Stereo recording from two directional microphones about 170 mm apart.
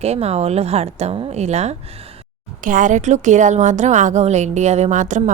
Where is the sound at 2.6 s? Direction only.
50° right (ahead or behind).